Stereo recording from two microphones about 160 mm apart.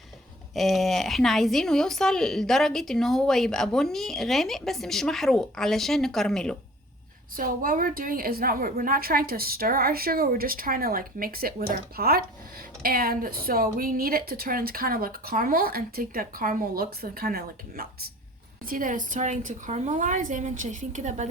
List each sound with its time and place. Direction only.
0.5 s a woman's voice: centre (ahead or behind)
7.3 s a woman's voice: 60° right (ahead or behind)
18.7 s a woman's voice: 55° right (ahead or behind)